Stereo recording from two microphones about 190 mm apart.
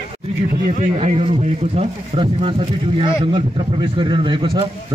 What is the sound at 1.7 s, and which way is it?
A man's voice, 30° right (ahead or behind).